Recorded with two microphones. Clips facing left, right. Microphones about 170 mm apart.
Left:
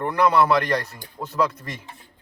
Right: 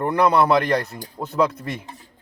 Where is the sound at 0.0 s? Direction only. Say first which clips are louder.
Right 1 dB; 25° right (ahead or behind).